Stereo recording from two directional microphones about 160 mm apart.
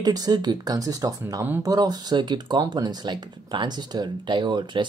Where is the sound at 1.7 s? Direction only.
25° right (ahead or behind).